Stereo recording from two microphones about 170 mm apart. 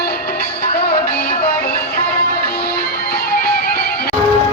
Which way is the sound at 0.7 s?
70° left (ahead or behind).